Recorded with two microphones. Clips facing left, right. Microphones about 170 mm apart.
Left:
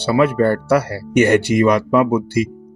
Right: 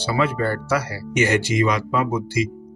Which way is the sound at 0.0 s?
60° left (ahead or behind).